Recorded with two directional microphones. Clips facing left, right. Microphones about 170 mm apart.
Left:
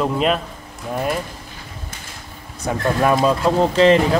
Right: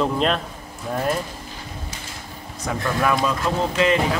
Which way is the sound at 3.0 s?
30° left (ahead or behind).